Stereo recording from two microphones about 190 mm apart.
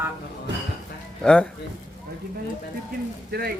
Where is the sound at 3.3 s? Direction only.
60° right (ahead or behind).